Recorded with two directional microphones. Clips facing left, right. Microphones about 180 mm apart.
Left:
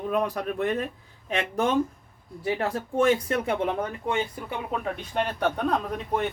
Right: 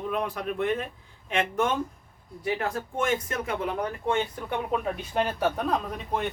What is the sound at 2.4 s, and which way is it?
Speech, 30° left (ahead or behind).